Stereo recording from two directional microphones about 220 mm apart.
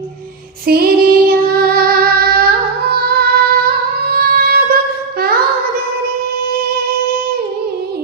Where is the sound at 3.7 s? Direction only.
40° right (ahead or behind).